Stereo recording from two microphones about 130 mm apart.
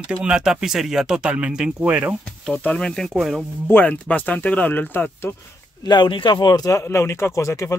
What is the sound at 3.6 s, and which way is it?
Speech, 15° left (ahead or behind).